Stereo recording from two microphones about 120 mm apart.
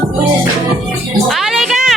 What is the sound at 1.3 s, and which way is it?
Music, centre (ahead or behind).